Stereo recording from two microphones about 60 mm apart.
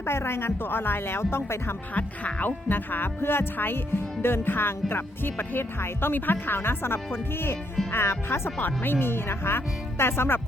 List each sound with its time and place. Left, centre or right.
0.0 s speech: left
2.0 s speech: left
8.5 s speech: left